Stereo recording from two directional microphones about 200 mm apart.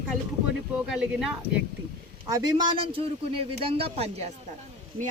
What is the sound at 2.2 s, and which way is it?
A man's voice, 20° right (ahead or behind).